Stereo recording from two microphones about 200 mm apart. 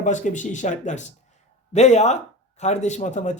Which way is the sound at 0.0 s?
40° left (ahead or behind).